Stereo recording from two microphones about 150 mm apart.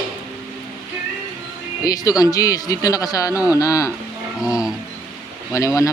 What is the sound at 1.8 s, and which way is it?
Speech, 25° left (ahead or behind).